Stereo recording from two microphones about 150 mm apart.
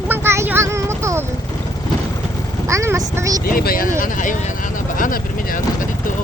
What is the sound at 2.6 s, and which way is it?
Speech, 20° right (ahead or behind).